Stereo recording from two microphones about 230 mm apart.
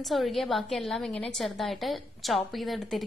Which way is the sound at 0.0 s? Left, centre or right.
Centre.